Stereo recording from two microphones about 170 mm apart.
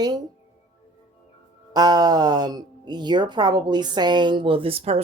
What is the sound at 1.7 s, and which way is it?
Speech, 25° right (ahead or behind).